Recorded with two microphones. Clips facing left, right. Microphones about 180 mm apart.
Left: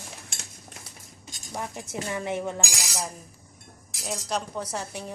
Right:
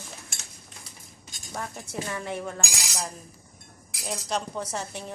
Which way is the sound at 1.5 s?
15° left (ahead or behind).